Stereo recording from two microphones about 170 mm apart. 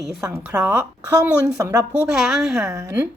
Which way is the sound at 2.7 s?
15° right (ahead or behind).